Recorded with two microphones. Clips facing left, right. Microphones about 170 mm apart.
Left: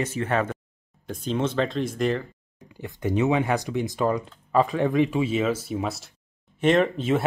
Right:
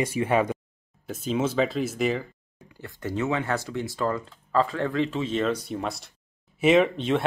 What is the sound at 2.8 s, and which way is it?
Speech, 20° left (ahead or behind).